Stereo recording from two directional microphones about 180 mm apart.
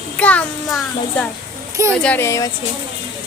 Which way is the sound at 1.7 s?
15° right (ahead or behind).